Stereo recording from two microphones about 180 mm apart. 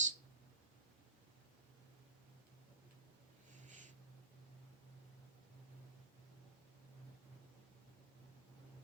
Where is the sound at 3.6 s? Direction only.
45° right (ahead or behind).